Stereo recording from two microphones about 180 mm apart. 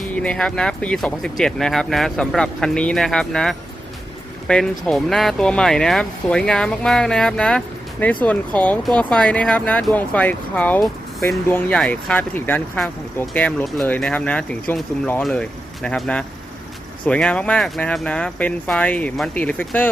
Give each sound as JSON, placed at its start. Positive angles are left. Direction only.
{"t": 0.2, "sound": "speech", "side_deg": 5}